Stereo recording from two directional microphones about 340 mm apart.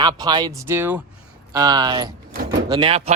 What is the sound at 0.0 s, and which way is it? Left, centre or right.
Speech, centre.